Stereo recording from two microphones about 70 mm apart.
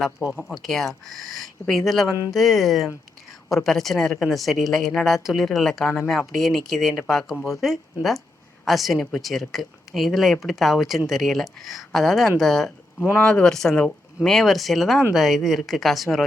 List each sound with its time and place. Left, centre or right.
0.4 s speech: centre
13.0 s speech: left
13.4 s speech: centre